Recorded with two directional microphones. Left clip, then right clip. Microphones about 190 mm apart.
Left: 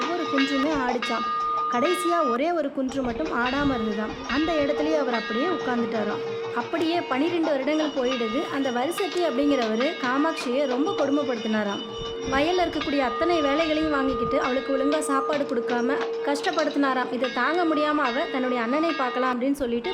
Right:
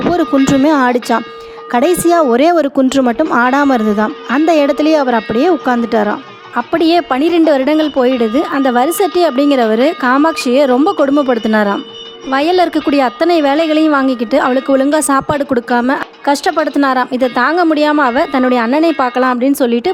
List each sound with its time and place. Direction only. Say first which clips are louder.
0.1 s speech: right 13 dB; 45° right (ahead or behind)